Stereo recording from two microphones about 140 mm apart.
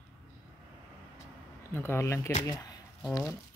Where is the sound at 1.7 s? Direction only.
15° left (ahead or behind).